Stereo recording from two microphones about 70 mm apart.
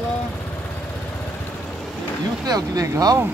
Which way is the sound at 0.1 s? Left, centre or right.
Left.